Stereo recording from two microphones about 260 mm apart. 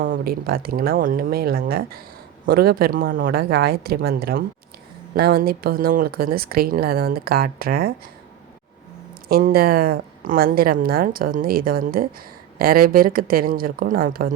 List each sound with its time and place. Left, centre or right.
0.0 s speech: right
9.3 s speech: right